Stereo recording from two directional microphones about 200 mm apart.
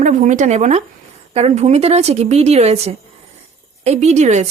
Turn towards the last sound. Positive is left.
turn(degrees=-35)  # may be behind; listen again after turning